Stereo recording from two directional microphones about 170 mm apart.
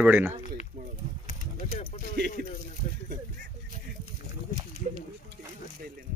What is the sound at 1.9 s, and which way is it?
Music, 40° left (ahead or behind).